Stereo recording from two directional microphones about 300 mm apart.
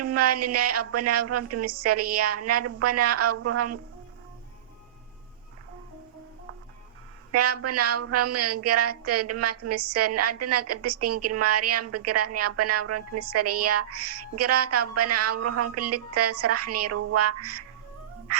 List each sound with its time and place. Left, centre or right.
0.0 s speech: right
7.3 s speech: right
18.3 s music: right